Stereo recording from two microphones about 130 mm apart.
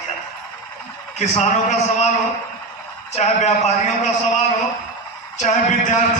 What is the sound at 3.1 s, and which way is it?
Speech, 60° left (ahead or behind).